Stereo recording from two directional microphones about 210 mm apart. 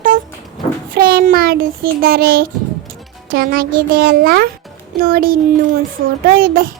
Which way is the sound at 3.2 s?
45° right (ahead or behind).